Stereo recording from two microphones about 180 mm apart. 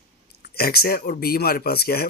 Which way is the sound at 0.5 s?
60° left (ahead or behind).